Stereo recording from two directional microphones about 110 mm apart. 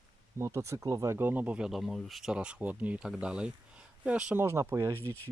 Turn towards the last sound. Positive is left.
turn(degrees=20)  # may be behind; listen again after turning